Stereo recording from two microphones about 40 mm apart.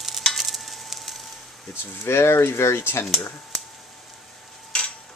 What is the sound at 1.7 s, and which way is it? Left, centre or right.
Speech, left.